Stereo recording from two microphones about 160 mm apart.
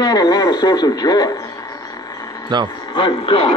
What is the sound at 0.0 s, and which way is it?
Speech, 25° left (ahead or behind).